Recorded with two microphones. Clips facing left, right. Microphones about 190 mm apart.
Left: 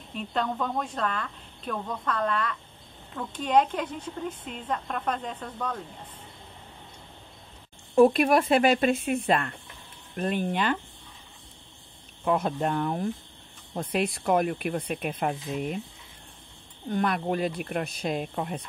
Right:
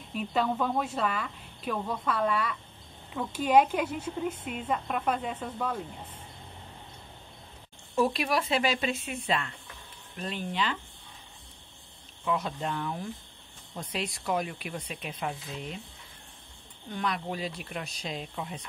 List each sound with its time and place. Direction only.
0.1 s speech: 5° right (ahead or behind)
7.9 s speech: 50° left (ahead or behind)
12.3 s speech: 55° left (ahead or behind)
16.9 s speech: 55° left (ahead or behind)